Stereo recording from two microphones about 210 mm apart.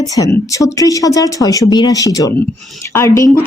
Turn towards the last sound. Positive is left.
turn(degrees=15)  # may be behind; listen again after turning